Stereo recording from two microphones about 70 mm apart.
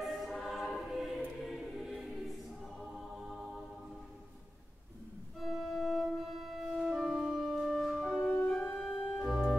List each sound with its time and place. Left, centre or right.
0.0 s choir: centre
5.4 s organ: centre
8.2 s music: centre
8.8 s organ: centre